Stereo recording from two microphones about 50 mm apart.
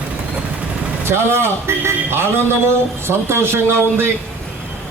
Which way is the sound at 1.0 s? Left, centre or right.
Right.